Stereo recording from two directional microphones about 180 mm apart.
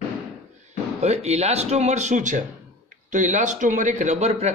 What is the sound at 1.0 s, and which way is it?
A man's voice, 35° right (ahead or behind).